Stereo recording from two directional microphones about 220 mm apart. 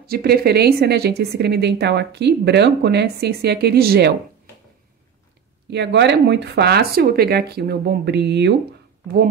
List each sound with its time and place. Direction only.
0.1 s speech: 45° right (ahead or behind)
5.7 s speech: 50° right (ahead or behind)